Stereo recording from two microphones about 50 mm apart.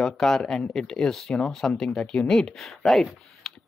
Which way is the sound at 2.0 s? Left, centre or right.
Left.